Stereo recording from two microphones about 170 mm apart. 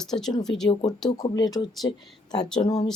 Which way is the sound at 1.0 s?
20° left (ahead or behind).